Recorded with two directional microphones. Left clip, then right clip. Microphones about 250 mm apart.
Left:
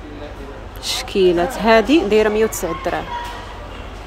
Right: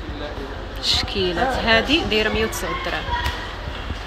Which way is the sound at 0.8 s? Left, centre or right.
Left.